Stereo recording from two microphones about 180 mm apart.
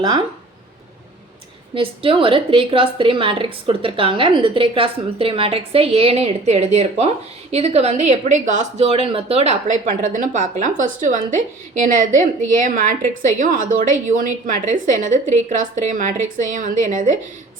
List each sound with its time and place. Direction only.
1.7 s a woman's voice: 30° right (ahead or behind); by 17.1 s 45° right (ahead or behind)